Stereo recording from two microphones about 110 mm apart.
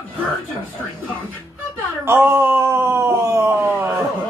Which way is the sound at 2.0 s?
20° right (ahead or behind).